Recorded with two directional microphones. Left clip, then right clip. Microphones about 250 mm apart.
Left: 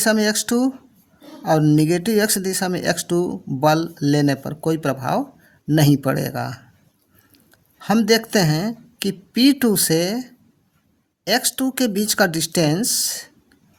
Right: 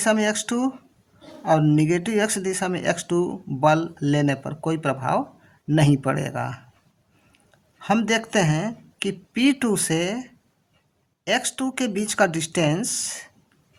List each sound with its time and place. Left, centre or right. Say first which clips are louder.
0.0 s speech: left 3 dB; left
7.8 s speech: left 4 dB; left